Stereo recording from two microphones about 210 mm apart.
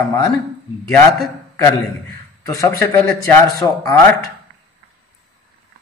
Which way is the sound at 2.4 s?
15° left (ahead or behind).